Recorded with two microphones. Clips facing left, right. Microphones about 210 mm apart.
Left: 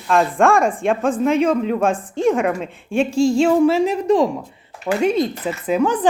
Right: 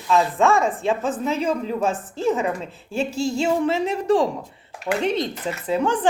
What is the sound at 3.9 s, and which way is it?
Speech, 30° right (ahead or behind).